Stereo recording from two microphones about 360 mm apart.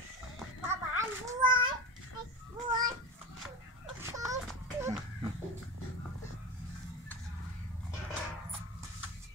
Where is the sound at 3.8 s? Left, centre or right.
Centre.